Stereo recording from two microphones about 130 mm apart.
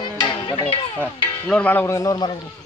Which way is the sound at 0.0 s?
35° left (ahead or behind).